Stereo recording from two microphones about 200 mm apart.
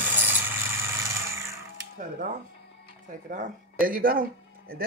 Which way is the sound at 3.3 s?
45° right (ahead or behind).